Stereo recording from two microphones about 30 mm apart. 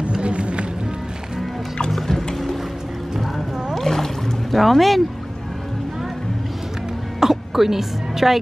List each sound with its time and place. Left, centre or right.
0.2 s music: right
2.0 s music: centre
3.2 s boat: centre
7.2 s music: centre